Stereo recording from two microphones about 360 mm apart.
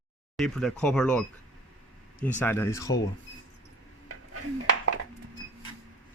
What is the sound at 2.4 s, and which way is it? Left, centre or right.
Speech, centre.